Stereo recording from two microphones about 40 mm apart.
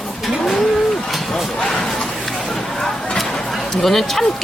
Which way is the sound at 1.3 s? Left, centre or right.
Centre.